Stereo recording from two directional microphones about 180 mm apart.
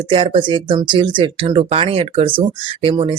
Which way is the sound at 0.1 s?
30° right (ahead or behind).